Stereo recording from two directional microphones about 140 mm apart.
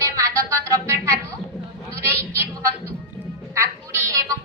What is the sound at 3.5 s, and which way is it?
Speech, 20° right (ahead or behind).